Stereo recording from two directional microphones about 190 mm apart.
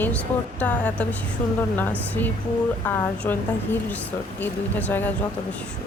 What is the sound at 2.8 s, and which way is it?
A woman's voice, 10° left (ahead or behind).